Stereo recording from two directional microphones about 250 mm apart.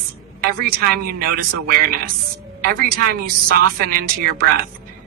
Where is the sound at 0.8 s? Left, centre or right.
Right.